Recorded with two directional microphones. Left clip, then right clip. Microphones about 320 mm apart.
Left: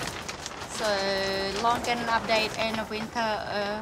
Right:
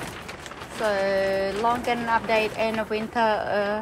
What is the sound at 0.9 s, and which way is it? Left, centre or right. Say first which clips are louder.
Speech: right 4 dB; centre.